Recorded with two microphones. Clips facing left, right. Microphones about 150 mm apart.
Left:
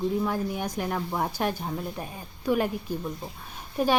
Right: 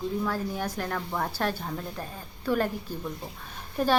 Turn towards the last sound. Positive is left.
turn(degrees=10)  # may be behind; listen again after turning